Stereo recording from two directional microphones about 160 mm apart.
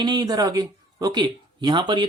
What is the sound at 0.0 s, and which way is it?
Speech, 25° right (ahead or behind).